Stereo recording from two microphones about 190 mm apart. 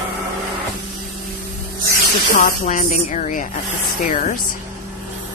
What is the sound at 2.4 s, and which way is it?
A woman's voice, 45° left (ahead or behind).